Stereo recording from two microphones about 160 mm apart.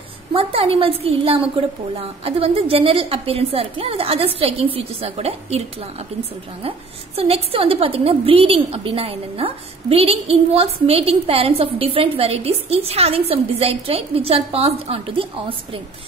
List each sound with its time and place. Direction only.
0.3 s a woman's voice: 35° right (ahead or behind)
7.2 s a woman's voice: 35° right (ahead or behind)